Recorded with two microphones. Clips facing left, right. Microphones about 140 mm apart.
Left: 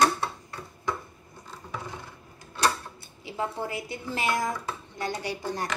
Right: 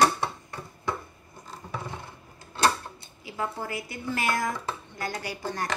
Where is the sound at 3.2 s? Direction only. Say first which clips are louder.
Left 1 dB; 25° left (ahead or behind).